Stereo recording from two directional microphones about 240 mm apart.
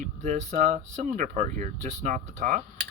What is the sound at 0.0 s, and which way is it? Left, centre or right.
Speech, right.